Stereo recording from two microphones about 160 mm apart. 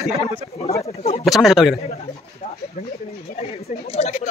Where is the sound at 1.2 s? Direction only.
Centre (ahead or behind).